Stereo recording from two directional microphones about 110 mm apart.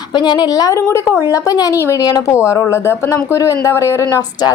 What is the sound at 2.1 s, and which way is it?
A woman's voice, 35° left (ahead or behind).